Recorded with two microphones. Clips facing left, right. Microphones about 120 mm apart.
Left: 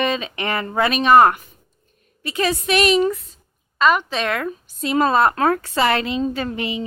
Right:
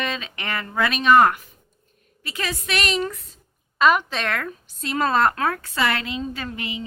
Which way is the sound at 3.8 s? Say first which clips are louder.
Left 1 dB; 5° right (ahead or behind).